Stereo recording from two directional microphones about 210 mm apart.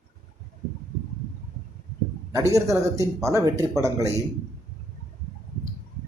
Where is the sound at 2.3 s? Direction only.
15° right (ahead or behind).